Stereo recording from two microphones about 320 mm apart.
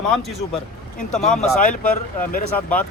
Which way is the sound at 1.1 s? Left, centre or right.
Centre.